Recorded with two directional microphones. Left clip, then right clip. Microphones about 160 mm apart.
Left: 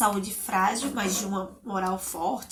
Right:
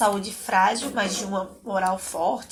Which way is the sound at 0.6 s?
15° right (ahead or behind).